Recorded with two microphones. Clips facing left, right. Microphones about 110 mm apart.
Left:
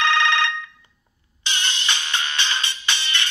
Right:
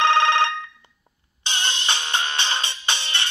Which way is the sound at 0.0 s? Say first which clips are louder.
Right 3 dB; 40° right (ahead or behind).